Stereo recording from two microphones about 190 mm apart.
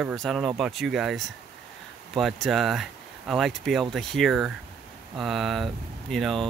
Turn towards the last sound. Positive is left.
turn(degrees=0)  # may be behind; listen again after turning